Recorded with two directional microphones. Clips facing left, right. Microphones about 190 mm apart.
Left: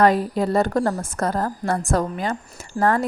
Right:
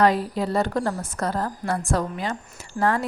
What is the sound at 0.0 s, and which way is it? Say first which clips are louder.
A woman's voice: left 3 dB; 50° left (ahead or behind).